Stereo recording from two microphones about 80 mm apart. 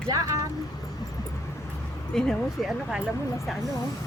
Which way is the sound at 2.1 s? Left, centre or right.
Centre.